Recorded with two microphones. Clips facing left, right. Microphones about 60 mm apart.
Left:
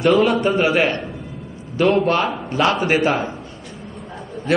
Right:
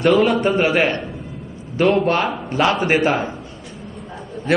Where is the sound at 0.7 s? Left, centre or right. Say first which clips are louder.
Even; right.